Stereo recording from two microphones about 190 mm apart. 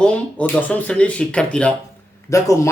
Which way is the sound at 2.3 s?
15° left (ahead or behind).